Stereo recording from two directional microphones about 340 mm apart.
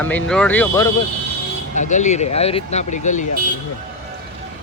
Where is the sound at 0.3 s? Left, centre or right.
Centre.